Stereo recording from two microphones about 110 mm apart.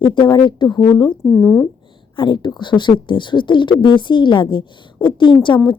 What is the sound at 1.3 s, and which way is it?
Speech, 20° left (ahead or behind).